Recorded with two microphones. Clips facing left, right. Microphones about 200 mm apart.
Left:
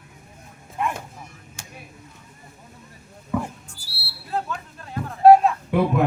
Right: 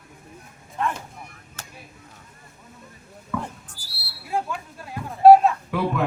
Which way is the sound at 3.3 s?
20° left (ahead or behind).